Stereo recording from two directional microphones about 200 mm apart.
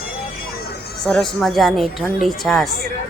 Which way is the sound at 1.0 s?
Centre (ahead or behind).